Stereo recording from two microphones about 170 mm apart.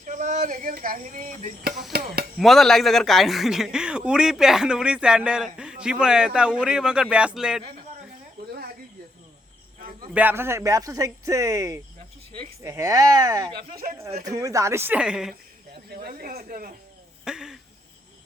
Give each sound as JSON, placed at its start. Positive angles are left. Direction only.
{"t": 0.0, "sound": "speech", "side_deg": -45}
{"t": 1.9, "sound": "speech", "side_deg": -65}
{"t": 2.4, "sound": "speech", "side_deg": 0}
{"t": 10.2, "sound": "speech", "side_deg": -10}
{"t": 15.9, "sound": "speech", "side_deg": -65}
{"t": 17.2, "sound": "speech", "side_deg": -5}